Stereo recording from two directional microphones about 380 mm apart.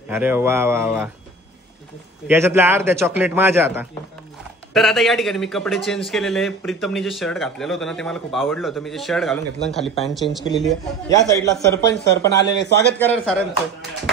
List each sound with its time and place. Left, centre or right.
0.1 s speech: centre
2.2 s speech: centre
11.9 s speech: left
13.0 s speech: centre